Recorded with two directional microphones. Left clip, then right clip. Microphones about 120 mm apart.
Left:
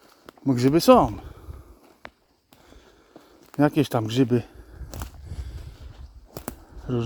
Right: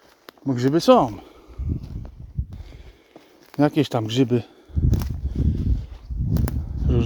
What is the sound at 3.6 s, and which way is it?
Speech, centre (ahead or behind).